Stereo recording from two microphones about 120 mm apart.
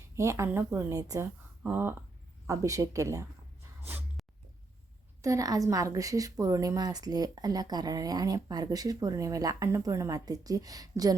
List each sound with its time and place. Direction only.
0.2 s a woman's voice: 25° right (ahead or behind)
1.6 s a woman's voice: 15° right (ahead or behind)
4.2 s dog: centre (ahead or behind)
5.2 s a woman's voice: 30° right (ahead or behind)